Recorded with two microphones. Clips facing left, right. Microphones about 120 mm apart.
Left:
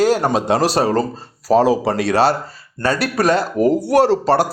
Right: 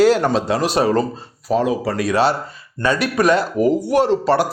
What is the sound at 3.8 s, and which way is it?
Speech, 65° left (ahead or behind).